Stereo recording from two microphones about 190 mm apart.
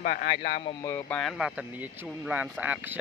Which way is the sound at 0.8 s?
15° left (ahead or behind).